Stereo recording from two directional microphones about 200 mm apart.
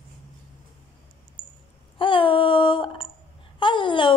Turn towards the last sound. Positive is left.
turn(degrees=25)  # may be behind; listen again after turning